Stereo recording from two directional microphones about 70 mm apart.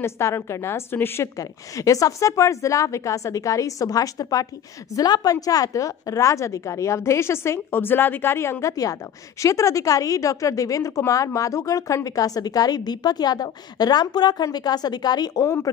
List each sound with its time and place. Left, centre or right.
0.0 s a woman's voice: left
1.4 s a woman's voice: left